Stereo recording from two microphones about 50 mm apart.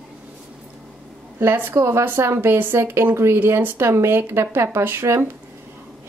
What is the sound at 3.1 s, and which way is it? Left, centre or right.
Speech, right.